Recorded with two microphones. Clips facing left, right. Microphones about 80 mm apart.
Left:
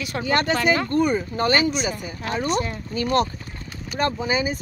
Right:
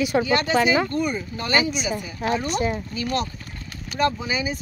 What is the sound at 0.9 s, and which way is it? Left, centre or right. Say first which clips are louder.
Speech: left 5 dB; left.